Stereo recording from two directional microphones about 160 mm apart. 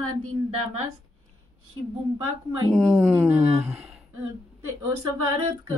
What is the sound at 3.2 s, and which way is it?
Speech, 15° right (ahead or behind).